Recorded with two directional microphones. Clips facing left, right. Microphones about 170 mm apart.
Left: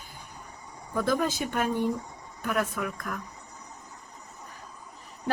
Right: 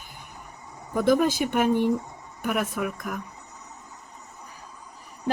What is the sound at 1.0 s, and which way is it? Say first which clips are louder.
Speech: right 6 dB; 15° right (ahead or behind).